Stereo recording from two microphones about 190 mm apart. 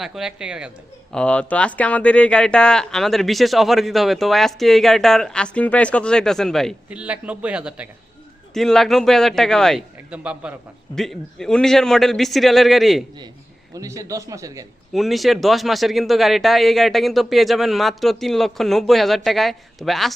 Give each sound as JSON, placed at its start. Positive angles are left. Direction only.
{"t": 0.0, "sound": "speech", "side_deg": 0}
{"t": 13.7, "sound": "a man's voice", "side_deg": -15}
{"t": 14.9, "sound": "speech", "side_deg": 0}